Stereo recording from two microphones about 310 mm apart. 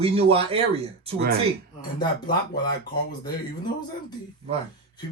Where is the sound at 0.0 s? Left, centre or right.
Centre.